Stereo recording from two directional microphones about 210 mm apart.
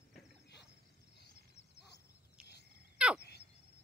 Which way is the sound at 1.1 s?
50° left (ahead or behind).